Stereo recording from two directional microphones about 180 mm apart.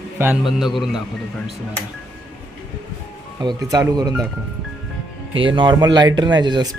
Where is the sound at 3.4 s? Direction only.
20° right (ahead or behind).